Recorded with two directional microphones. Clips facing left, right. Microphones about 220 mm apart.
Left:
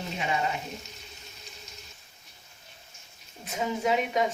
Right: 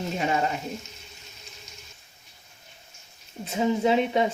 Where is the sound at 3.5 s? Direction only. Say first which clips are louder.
Right 5 dB; 30° right (ahead or behind).